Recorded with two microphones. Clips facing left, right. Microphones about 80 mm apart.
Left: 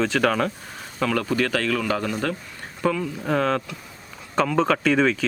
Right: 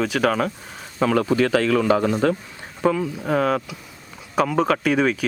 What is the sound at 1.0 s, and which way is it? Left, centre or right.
A man's voice, right.